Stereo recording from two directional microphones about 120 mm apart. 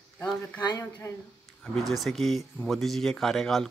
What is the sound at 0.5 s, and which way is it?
Speech, 35° left (ahead or behind).